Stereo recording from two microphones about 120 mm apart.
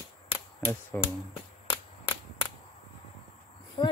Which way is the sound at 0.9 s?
15° left (ahead or behind).